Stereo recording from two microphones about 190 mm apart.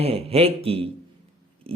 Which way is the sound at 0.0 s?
30° right (ahead or behind).